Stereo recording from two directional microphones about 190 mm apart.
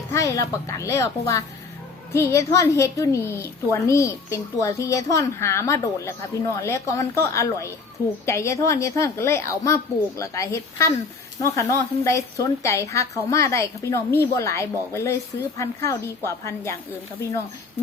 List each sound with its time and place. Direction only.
0.1 s a woman's voice: 15° left (ahead or behind)